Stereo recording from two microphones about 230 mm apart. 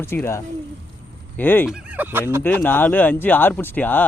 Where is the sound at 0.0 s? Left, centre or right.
Centre.